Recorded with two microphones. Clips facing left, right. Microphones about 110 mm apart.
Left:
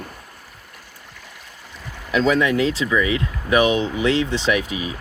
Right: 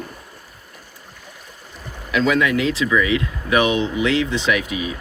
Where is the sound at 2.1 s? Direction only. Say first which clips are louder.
Even; 35° left (ahead or behind).